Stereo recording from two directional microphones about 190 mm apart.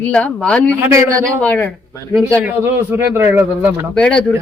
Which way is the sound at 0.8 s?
15° right (ahead or behind).